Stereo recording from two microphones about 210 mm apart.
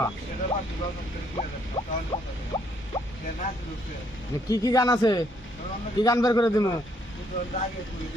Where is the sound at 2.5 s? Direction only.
20° left (ahead or behind).